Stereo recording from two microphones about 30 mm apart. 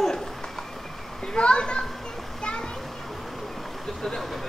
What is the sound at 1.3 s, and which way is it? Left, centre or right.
Speech, left.